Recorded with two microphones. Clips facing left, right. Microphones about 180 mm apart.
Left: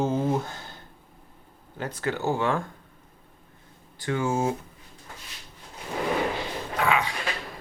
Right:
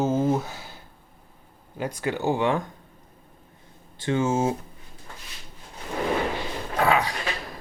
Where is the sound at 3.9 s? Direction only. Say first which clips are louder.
Right 3 dB; 25° right (ahead or behind).